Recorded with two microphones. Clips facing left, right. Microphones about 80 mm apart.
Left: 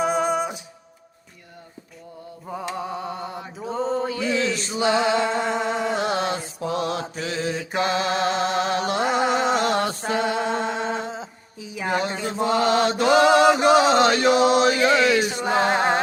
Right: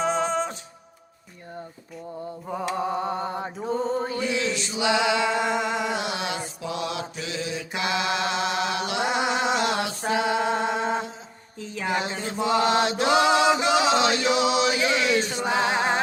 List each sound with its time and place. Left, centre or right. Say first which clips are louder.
0.0 s music: left 2 dB; centre
2.5 s a sound: right 1 dB; centre
2.7 s mantra: right 3 dB; right
4.3 s a sound: left 3 dB; left
11.6 s music: left 1 dB; centre
11.9 s mantra: left 3 dB; left
15.4 s music: left 3 dB; left